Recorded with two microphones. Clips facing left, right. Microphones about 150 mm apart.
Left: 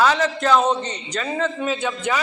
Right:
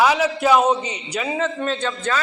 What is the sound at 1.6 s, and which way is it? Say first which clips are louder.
Speech: even; 10° left (ahead or behind).